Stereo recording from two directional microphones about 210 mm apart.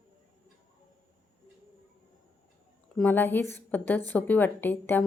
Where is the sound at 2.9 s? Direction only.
10° left (ahead or behind).